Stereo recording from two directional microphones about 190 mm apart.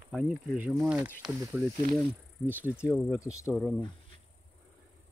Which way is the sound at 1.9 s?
5° right (ahead or behind).